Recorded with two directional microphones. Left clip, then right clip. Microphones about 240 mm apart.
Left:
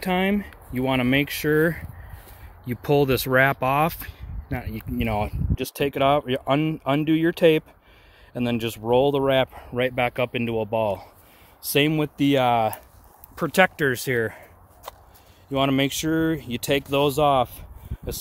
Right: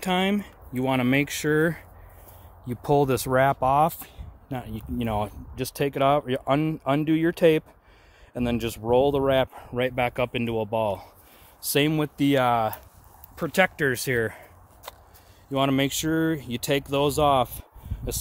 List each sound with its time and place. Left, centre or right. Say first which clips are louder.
0.0 s speech: left 1 dB; centre
4.6 s speech: left 2 dB; right
5.0 s speech: left 2 dB; centre
13.4 s speech: left 3 dB; left
13.8 s a sound: left 1 dB; centre
15.5 s speech: left 2 dB; centre